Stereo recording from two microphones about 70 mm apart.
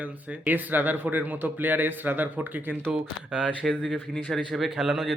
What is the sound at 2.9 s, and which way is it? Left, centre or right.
Speech, centre.